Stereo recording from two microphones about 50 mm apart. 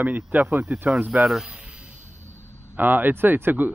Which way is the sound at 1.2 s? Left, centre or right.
Centre.